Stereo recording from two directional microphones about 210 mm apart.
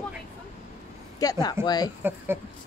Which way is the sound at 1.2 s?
20° left (ahead or behind).